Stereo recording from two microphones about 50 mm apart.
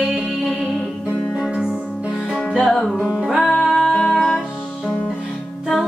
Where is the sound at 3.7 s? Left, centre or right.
Centre.